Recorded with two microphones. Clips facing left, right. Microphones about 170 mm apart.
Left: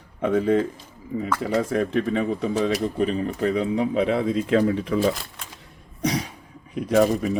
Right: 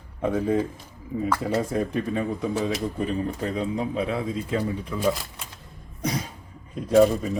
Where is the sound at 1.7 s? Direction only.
75° left (ahead or behind).